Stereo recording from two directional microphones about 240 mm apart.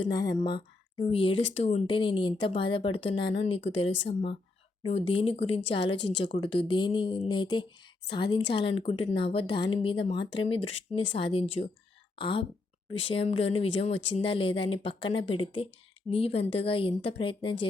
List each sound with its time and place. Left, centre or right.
0.0 s speech: centre